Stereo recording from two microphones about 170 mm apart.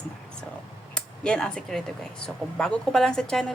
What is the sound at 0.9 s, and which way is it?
A woman's voice, 5° left (ahead or behind).